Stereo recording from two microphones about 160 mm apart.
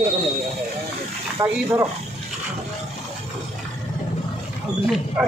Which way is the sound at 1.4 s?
15° right (ahead or behind).